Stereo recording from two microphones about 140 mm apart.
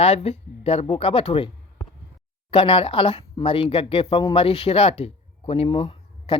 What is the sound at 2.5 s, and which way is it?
Speech, 40° left (ahead or behind).